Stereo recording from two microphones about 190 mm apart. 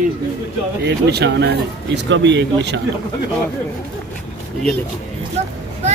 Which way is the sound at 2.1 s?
70° right (ahead or behind).